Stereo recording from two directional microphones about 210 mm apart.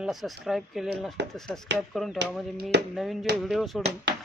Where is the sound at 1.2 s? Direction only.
55° right (ahead or behind).